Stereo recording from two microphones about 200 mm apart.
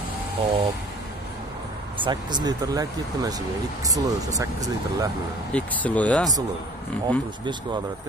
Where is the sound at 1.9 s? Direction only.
25° right (ahead or behind).